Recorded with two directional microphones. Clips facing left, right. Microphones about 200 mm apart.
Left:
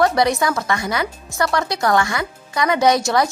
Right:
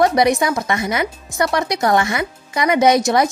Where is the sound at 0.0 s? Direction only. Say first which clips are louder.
Right 2 dB; 20° right (ahead or behind).